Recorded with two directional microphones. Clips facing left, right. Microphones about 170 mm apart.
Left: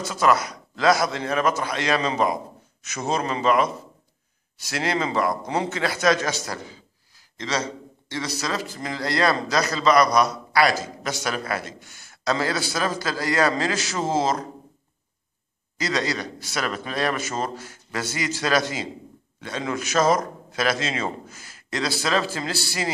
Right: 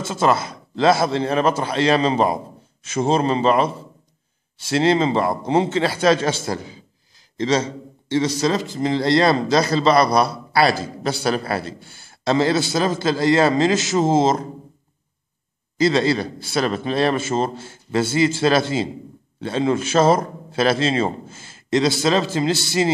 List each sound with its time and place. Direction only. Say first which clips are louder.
0.0 s a man's voice: right 2 dB; 25° right (ahead or behind)
15.8 s a man's voice: right 8 dB; 30° right (ahead or behind)